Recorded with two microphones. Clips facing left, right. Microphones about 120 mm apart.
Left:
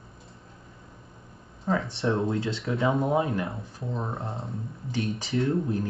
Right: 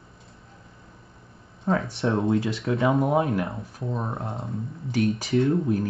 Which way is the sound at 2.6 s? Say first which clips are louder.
Right 3 dB; centre (ahead or behind).